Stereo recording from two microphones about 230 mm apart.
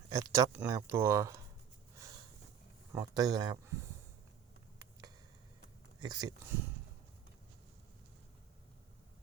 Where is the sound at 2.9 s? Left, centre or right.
Centre.